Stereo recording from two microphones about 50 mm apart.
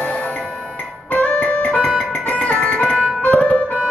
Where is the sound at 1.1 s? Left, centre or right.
Left.